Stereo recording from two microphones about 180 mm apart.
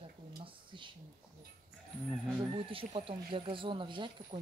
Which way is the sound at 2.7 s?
30° right (ahead or behind).